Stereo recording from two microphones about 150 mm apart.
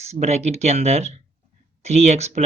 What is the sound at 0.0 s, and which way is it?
Speech, 45° right (ahead or behind).